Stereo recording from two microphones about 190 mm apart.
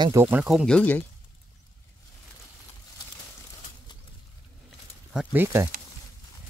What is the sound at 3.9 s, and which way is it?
Pigeon, 25° left (ahead or behind).